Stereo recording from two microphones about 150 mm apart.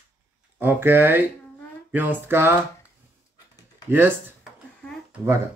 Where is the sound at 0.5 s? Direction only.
15° right (ahead or behind).